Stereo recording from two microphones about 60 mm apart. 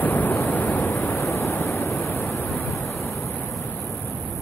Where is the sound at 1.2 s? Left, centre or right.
Left.